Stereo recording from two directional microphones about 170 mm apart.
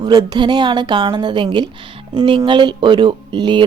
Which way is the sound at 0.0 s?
25° right (ahead or behind).